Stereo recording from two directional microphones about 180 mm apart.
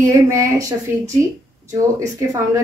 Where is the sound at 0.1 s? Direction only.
15° right (ahead or behind).